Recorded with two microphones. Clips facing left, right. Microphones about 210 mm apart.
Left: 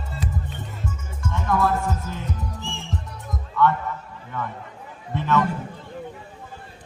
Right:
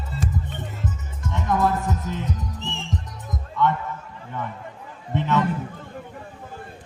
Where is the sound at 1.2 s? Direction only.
20° right (ahead or behind).